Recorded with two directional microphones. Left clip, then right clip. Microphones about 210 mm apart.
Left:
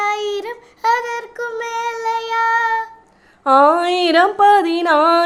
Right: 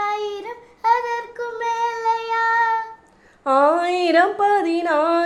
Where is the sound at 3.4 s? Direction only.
15° left (ahead or behind).